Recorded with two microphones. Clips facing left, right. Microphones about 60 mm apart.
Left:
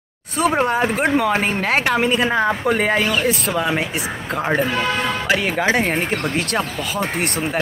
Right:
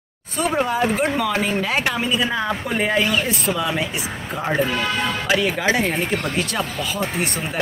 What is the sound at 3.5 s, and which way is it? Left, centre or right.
Speech, left.